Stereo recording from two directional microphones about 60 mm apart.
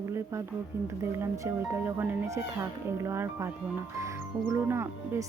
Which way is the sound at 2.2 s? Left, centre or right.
Right.